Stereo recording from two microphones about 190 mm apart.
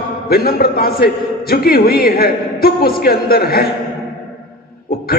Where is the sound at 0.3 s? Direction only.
55° left (ahead or behind).